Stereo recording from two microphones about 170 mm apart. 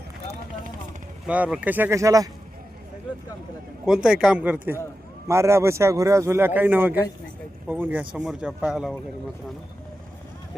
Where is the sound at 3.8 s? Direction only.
5° right (ahead or behind).